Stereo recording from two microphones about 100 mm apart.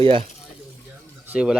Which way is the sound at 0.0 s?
60° right (ahead or behind).